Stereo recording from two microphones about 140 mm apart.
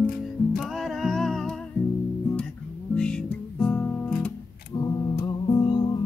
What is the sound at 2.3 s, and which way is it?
Guitar, 5° left (ahead or behind).